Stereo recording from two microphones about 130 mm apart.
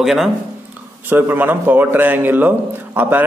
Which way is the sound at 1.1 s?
15° right (ahead or behind).